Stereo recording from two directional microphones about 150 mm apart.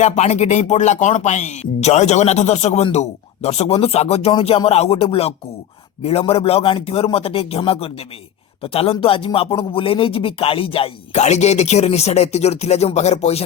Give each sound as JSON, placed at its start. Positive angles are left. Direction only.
{"t": 0.0, "sound": "speech", "side_deg": 50}